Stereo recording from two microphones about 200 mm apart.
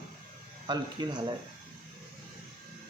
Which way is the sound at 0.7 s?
20° right (ahead or behind).